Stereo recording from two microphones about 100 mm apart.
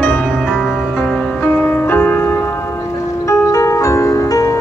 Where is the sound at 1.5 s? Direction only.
20° left (ahead or behind).